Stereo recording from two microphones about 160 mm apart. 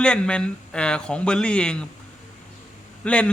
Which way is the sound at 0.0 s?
5° left (ahead or behind).